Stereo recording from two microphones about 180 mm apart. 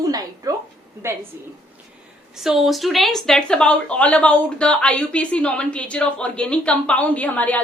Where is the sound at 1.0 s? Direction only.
15° right (ahead or behind).